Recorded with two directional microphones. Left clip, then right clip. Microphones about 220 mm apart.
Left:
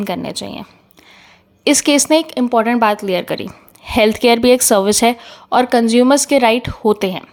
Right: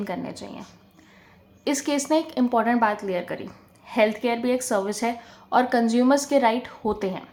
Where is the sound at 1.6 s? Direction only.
40° left (ahead or behind).